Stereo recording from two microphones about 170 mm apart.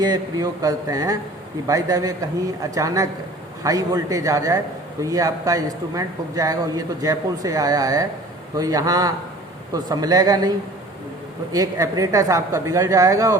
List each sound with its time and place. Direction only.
0.0 s a man's voice: 20° right (ahead or behind)
11.5 s a man's voice: 20° right (ahead or behind)